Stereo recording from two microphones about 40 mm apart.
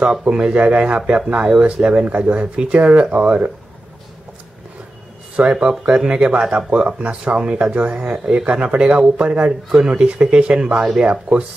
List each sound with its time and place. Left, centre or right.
0.2 s speech: right
5.3 s speech: centre
10.0 s speech: right